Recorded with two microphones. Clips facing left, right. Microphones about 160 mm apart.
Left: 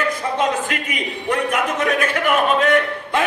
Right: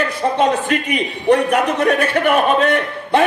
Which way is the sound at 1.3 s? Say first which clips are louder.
Right 7 dB; 35° right (ahead or behind).